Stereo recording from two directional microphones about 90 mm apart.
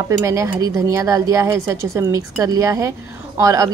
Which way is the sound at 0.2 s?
35° right (ahead or behind).